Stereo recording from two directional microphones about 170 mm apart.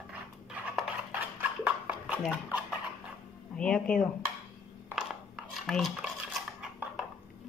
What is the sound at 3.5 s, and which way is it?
Speech, 5° left (ahead or behind).